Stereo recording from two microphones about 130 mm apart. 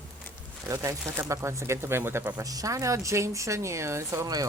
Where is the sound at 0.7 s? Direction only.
25° right (ahead or behind).